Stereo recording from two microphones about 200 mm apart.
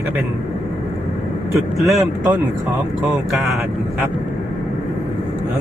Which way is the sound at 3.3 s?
Centre (ahead or behind).